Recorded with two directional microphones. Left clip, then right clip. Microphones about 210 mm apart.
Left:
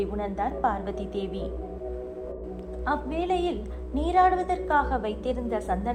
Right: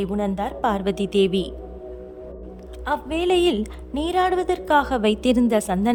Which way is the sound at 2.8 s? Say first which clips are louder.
Right 5 dB; 45° right (ahead or behind).